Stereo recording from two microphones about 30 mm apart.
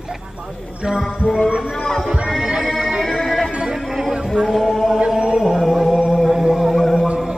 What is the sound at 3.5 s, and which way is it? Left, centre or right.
Music, right.